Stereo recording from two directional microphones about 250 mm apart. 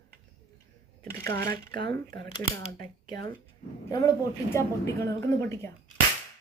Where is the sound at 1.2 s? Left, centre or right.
Right.